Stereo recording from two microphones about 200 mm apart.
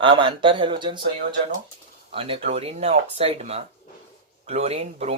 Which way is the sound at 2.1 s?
25° right (ahead or behind).